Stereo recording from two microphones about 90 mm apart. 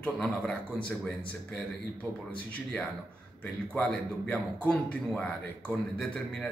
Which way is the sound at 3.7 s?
15° left (ahead or behind).